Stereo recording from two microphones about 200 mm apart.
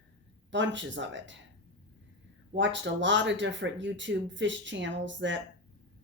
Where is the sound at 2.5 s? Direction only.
65° right (ahead or behind).